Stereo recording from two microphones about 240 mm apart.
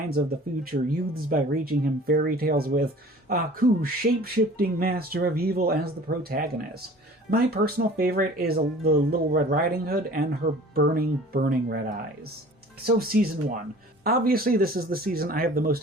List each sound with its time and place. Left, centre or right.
0.1 s speech: right
12.8 s speech: right